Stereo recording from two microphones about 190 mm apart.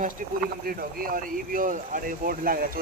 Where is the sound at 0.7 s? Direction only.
50° right (ahead or behind).